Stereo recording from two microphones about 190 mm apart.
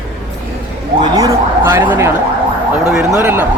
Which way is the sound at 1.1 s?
15° right (ahead or behind).